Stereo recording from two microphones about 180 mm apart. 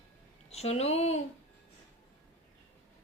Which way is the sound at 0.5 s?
35° left (ahead or behind).